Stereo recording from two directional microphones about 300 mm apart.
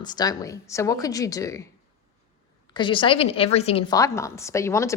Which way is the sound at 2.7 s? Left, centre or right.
Centre.